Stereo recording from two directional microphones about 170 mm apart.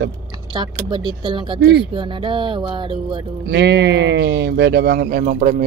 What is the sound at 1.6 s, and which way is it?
Speech, 75° right (ahead or behind).